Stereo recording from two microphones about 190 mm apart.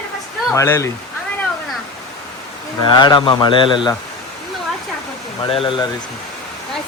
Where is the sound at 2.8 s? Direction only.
25° left (ahead or behind).